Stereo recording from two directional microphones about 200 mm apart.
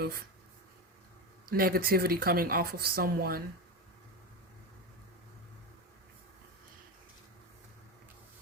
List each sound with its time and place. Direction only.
0.0 s speech: 50° right (ahead or behind)
1.5 s speech: 50° right (ahead or behind)